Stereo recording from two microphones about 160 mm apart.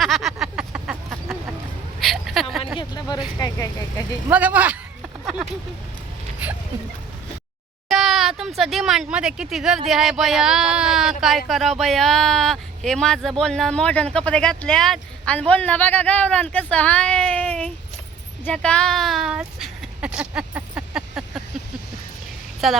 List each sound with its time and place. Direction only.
0.0 s a sound: centre (ahead or behind)
2.7 s vehicle: 25° left (ahead or behind)
3.3 s speech: 20° left (ahead or behind)
4.3 s speech: 10° right (ahead or behind)
5.2 s vehicle: 5° right (ahead or behind)
6.4 s speech: 10° right (ahead or behind)
7.9 s speech: centre (ahead or behind)
18.4 s a sound: 5° left (ahead or behind)
22.6 s speech: centre (ahead or behind)